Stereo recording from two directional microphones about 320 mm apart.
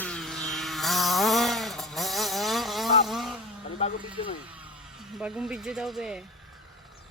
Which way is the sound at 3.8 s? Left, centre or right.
Centre.